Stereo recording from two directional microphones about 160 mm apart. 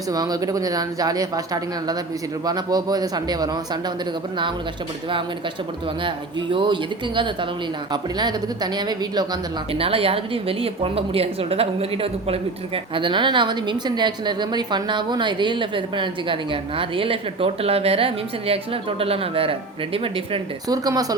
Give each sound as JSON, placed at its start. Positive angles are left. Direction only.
{"t": 0.1, "sound": "speech", "side_deg": -25}
{"t": 2.5, "sound": "speech", "side_deg": -25}
{"t": 6.1, "sound": "a woman's voice", "side_deg": -30}
{"t": 8.2, "sound": "speech", "side_deg": -25}
{"t": 9.7, "sound": "a woman's voice", "side_deg": -35}
{"t": 20.7, "sound": "speech", "side_deg": -25}